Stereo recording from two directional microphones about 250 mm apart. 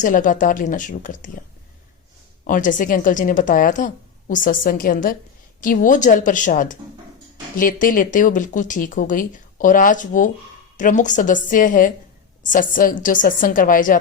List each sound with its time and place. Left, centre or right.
0.0 s speech: left
2.5 s speech: left